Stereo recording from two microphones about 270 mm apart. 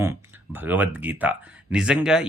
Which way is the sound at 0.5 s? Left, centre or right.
Centre.